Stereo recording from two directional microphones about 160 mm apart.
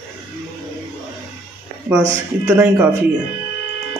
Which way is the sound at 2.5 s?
5° right (ahead or behind).